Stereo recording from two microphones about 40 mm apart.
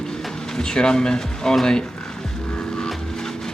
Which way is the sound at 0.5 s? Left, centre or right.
Centre.